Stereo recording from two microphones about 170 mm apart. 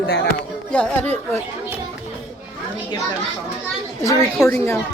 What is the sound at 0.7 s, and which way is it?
Speech, 5° left (ahead or behind).